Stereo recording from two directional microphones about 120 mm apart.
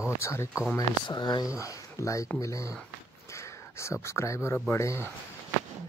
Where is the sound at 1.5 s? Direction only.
25° left (ahead or behind).